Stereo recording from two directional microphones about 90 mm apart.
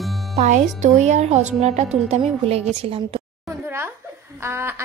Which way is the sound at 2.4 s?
90° right.